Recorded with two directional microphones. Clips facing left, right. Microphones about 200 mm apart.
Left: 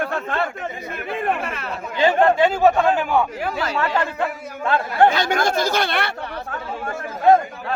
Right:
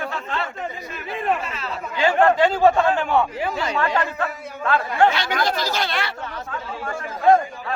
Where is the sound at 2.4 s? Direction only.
5° left (ahead or behind).